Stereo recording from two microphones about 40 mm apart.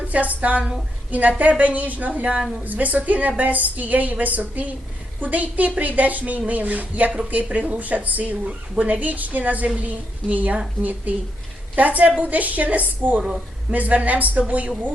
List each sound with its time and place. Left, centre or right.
0.1 s a woman's voice: right